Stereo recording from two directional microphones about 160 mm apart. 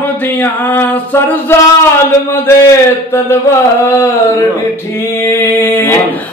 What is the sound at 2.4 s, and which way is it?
Speech, 15° left (ahead or behind).